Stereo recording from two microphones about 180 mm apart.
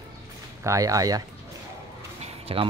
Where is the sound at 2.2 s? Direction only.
35° right (ahead or behind).